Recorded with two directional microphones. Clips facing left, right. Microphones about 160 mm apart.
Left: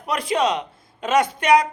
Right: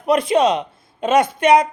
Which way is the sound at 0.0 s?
25° right (ahead or behind).